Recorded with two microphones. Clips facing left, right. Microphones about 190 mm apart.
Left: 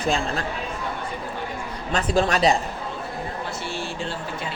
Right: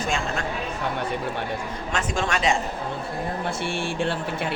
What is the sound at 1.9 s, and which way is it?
Speech, 35° left (ahead or behind).